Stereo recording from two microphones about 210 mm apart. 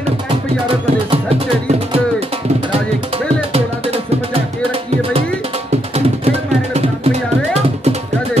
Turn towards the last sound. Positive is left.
turn(degrees=-30)  # may be behind; listen again after turning